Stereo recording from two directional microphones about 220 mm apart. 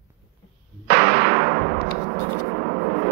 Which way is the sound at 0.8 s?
45° right (ahead or behind).